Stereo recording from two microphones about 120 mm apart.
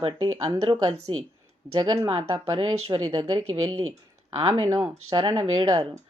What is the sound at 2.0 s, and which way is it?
Speech, 50° right (ahead or behind).